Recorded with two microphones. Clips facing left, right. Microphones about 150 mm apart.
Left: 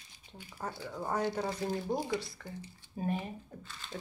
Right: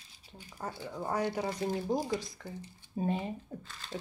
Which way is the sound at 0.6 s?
10° right (ahead or behind).